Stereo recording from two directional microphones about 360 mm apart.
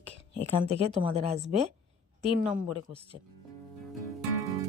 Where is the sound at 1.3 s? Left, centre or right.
Centre.